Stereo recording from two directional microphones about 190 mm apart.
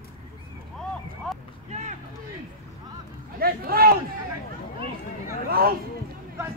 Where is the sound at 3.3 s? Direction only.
55° right (ahead or behind).